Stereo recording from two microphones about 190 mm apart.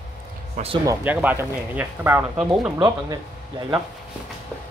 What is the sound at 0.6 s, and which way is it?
Speech, 40° right (ahead or behind).